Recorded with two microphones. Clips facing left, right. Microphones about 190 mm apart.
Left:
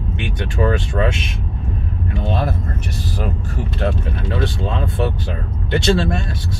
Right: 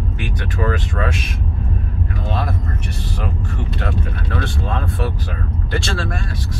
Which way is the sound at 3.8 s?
20° left (ahead or behind).